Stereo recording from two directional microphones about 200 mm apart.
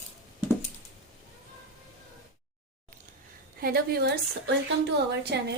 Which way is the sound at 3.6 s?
50° right (ahead or behind).